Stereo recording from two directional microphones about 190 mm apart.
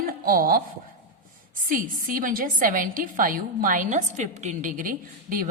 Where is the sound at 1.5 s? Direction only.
45° right (ahead or behind).